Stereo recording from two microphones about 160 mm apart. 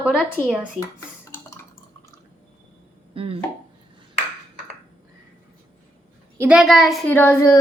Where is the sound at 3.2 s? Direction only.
35° right (ahead or behind).